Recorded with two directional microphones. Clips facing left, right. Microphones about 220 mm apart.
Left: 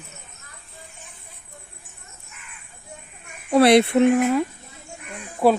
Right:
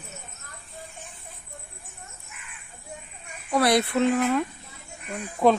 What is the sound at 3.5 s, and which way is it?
Speech, 25° left (ahead or behind).